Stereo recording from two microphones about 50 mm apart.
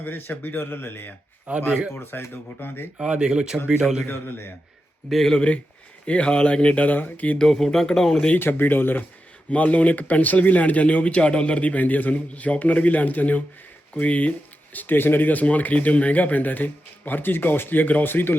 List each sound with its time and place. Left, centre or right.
0.0 s speech: left
1.5 s speech: right
2.0 s speech: left
3.0 s speech: centre
4.0 s speech: left
5.1 s speech: centre
6.1 s speech: left
7.3 s speech: centre
8.4 s speech: left
9.5 s speech: left